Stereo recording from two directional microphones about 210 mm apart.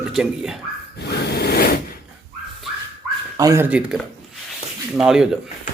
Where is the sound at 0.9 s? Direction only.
50° left (ahead or behind).